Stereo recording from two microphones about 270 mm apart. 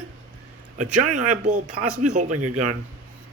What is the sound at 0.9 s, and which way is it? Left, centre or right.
Speech, right.